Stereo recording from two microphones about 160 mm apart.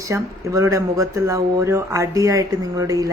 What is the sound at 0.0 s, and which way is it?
Speech, 20° right (ahead or behind).